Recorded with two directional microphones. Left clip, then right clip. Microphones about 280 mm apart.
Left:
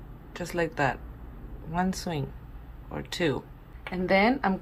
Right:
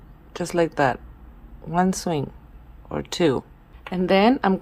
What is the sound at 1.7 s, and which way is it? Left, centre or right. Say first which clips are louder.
Speech: right 8 dB; centre.